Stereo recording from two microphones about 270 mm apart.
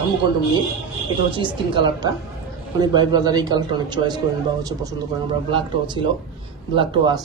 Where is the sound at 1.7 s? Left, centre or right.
Centre.